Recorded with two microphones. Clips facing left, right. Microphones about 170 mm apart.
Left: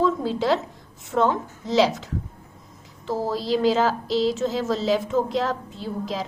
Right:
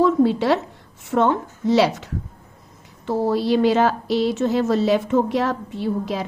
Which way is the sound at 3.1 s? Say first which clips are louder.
Right 5 dB; 65° right (ahead or behind).